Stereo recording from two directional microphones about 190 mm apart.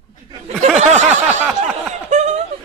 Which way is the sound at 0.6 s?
40° right (ahead or behind).